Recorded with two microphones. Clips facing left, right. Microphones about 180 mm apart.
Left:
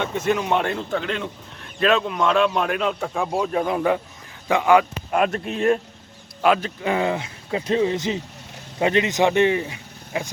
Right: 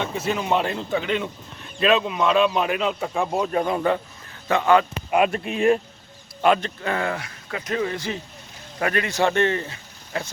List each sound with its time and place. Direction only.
0.0 s a man's voice: 10° right (ahead or behind); by 4.9 s 10° left (ahead or behind)
5.1 s speech: 5° right (ahead or behind)
6.8 s speech: 15° left (ahead or behind)